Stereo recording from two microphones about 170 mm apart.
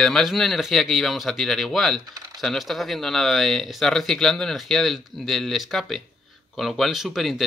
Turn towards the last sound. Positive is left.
turn(degrees=0)  # may be behind; listen again after turning